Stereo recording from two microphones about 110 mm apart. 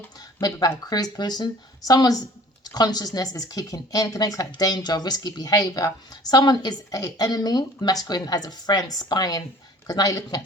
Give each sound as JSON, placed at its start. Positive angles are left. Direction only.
{"t": 0.2, "sound": "speech", "side_deg": 35}